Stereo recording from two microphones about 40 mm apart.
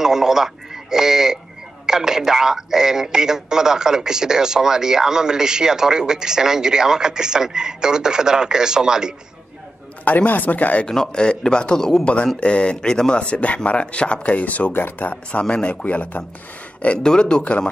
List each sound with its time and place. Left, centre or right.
0.0 s a man's voice: centre
10.0 s speech: left
10.9 s a man's voice: centre
12.0 s speech: left
12.9 s a man's voice: centre
13.2 s speech: left
14.7 s speech: left
15.4 s speech: left
15.7 s speech: left
17.0 s speech: left